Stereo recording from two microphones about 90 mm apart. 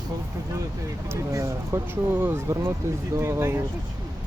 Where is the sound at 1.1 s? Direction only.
35° right (ahead or behind).